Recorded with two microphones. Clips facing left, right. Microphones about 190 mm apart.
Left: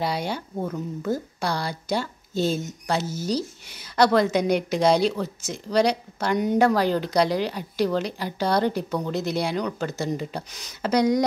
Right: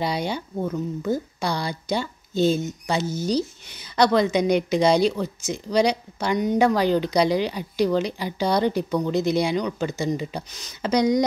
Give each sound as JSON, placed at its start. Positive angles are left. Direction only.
{"t": 0.0, "sound": "speech", "side_deg": 5}